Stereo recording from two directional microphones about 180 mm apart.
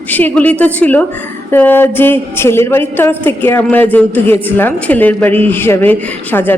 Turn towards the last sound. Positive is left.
turn(degrees=10)  # may be behind; listen again after turning